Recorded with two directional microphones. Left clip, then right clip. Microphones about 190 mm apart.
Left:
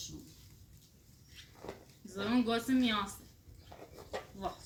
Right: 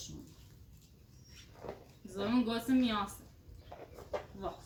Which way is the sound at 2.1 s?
5° right (ahead or behind).